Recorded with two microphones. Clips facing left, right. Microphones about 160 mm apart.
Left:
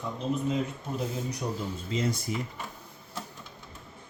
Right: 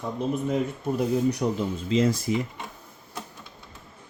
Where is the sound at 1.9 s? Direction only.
90° right.